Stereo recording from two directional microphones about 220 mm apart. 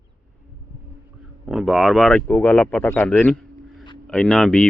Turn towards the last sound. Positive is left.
turn(degrees=0)  # may be behind; listen again after turning